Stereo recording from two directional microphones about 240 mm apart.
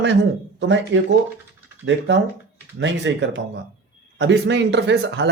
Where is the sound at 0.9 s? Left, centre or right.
Right.